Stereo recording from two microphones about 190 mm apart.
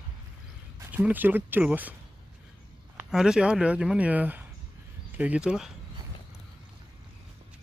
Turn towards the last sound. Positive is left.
turn(degrees=-5)  # may be behind; listen again after turning